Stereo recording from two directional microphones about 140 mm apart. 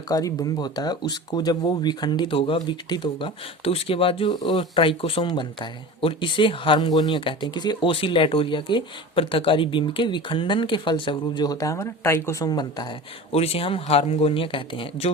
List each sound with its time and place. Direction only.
0.1 s speech: 25° left (ahead or behind)
13.3 s speech: 45° left (ahead or behind)